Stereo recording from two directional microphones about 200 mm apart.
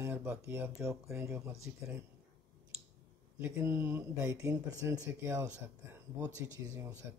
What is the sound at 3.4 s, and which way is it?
Speech, 10° right (ahead or behind).